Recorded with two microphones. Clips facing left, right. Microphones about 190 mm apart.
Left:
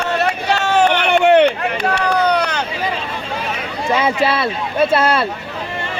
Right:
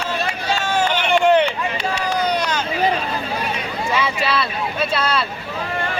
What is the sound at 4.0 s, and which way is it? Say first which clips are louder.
Speech: left 5 dB; 50° left (ahead or behind).